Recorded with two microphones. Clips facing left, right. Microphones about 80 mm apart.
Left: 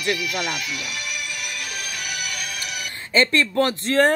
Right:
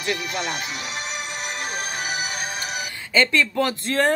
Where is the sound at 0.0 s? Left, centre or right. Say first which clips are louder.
Left 2 dB; right.